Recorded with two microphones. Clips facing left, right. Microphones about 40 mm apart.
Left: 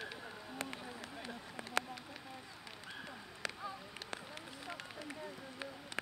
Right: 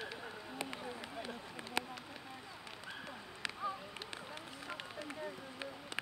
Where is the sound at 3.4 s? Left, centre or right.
Centre.